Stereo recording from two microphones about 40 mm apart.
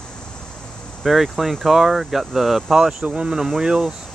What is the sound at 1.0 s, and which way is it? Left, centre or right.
Speech, centre.